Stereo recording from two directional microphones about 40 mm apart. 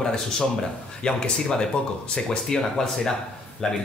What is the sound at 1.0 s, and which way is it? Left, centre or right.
Speech, left.